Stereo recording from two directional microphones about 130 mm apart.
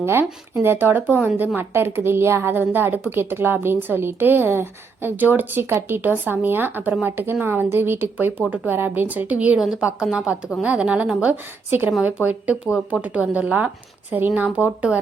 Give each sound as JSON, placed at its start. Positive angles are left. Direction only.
{"t": 0.0, "sound": "a woman's voice", "side_deg": -15}